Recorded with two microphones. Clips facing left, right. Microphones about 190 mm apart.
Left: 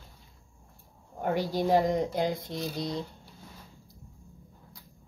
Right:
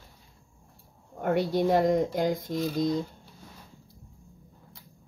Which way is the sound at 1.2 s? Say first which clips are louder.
Right 3 dB; 60° right (ahead or behind).